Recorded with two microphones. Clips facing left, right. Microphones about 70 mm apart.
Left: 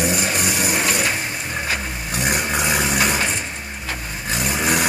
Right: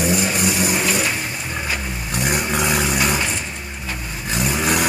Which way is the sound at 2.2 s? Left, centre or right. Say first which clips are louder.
Right 1 dB; centre.